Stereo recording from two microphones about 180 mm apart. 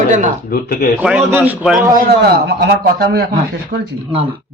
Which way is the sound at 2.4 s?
65° right (ahead or behind).